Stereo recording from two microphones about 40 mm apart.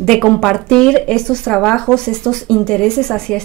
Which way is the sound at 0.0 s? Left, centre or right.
Centre.